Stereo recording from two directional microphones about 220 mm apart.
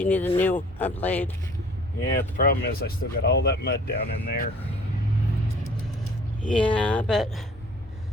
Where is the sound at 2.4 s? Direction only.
45° left (ahead or behind).